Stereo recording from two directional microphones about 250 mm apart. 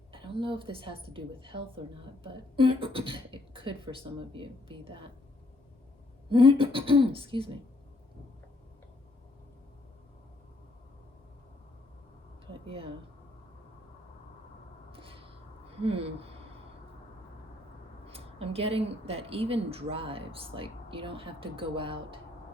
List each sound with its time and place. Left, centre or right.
0.1 s a woman's voice: centre
6.2 s a woman's voice: right
12.6 s speech: right
14.9 s a sound: right
15.7 s speech: right
18.0 s a woman's voice: right